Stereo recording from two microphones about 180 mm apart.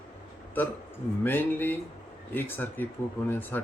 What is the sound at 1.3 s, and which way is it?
Speech, 10° left (ahead or behind).